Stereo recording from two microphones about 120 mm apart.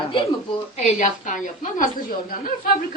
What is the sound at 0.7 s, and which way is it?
A woman's voice, 85° left.